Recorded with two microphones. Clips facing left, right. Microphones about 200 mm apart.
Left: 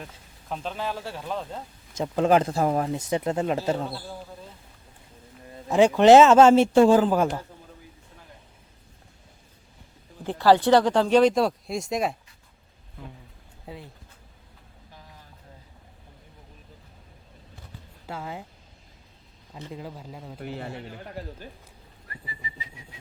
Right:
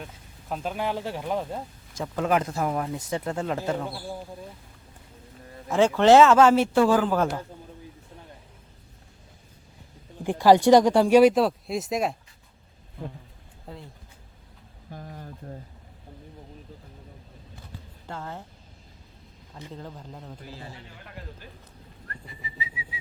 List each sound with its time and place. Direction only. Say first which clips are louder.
0.0 s speech: right 1 dB; 5° right (ahead or behind)
2.0 s a man's voice: left 4 dB; 30° left (ahead or behind)
3.1 s a man's voice: left 4 dB; 20° left (ahead or behind)
5.6 s a man's voice: left 3 dB; 15° left (ahead or behind)
10.2 s speech: right 2 dB; 15° right (ahead or behind)
13.7 s speech: left 1 dB; 5° left (ahead or behind)
14.8 s a sound: right 11 dB; 50° right (ahead or behind)
18.0 s speech: left 2 dB; 10° left (ahead or behind)
19.5 s speech: left 2 dB; 10° left (ahead or behind)
20.4 s a man's voice: left 7 dB; 65° left (ahead or behind)
22.0 s whistling: left 1 dB; 5° left (ahead or behind)